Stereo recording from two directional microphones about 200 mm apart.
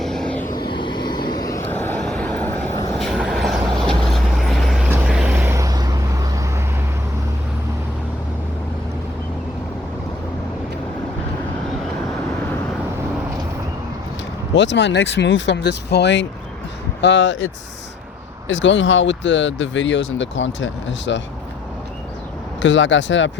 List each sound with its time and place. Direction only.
0.0 s vehicle: centre (ahead or behind)
0.5 s vehicle: 20° left (ahead or behind); by 6.5 s 15° right (ahead or behind)
14.5 s speech: 60° left (ahead or behind)
22.6 s speech: 65° left (ahead or behind)